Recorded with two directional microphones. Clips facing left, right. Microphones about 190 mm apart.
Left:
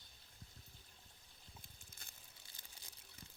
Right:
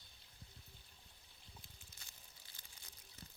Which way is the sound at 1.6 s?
55° left (ahead or behind).